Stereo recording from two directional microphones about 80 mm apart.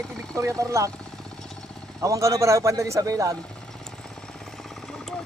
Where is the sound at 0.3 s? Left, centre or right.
Right.